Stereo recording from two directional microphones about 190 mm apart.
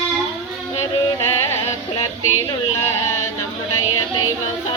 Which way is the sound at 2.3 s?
90° left.